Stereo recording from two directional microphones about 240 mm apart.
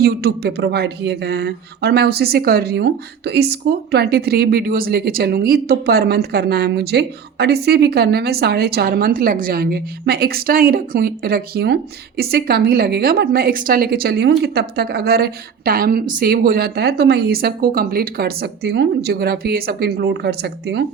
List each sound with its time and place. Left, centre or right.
0.0 s speech: right